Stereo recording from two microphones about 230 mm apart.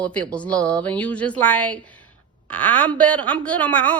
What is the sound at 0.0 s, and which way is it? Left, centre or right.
A woman's voice, centre.